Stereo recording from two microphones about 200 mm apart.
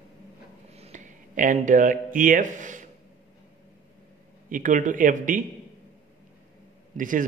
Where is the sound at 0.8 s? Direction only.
35° right (ahead or behind).